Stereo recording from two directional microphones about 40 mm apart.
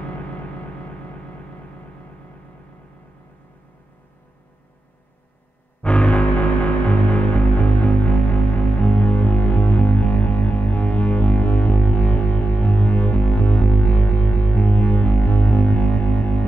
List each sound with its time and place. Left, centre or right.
5.8 s music: left